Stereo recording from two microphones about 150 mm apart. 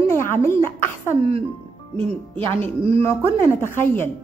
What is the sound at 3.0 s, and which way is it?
A woman's voice, 15° left (ahead or behind).